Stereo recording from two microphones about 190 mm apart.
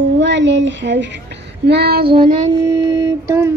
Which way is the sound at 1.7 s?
60° right (ahead or behind).